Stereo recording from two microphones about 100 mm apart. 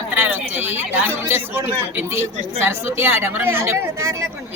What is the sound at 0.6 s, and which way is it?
Speech, 20° right (ahead or behind).